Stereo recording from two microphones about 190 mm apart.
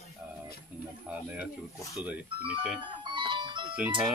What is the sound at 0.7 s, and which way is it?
Speech, 5° right (ahead or behind).